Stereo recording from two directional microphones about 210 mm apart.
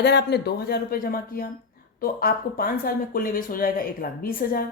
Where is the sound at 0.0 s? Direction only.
55° left (ahead or behind).